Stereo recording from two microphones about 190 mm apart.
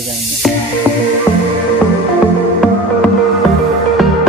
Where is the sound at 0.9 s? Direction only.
10° right (ahead or behind).